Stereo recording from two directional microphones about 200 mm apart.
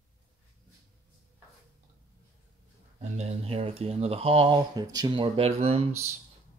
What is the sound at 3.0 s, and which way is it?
Speech, 30° right (ahead or behind).